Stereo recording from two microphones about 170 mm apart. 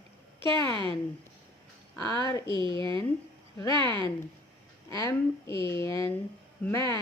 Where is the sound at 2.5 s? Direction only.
30° right (ahead or behind).